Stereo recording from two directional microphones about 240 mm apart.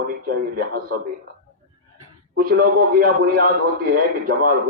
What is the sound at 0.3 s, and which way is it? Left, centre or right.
Speech, right.